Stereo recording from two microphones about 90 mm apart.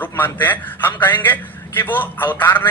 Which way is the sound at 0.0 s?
20° left (ahead or behind).